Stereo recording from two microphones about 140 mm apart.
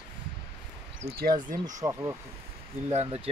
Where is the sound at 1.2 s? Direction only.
80° right.